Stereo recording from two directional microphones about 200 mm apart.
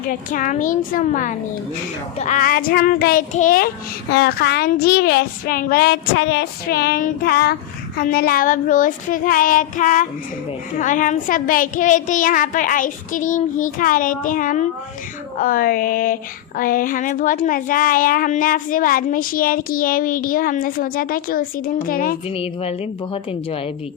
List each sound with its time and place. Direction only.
0.1 s a child's voice: 40° left (ahead or behind)
4.1 s a child's voice: 55° left (ahead or behind)